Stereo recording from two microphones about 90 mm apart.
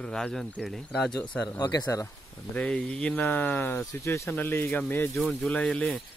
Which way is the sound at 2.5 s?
15° left (ahead or behind).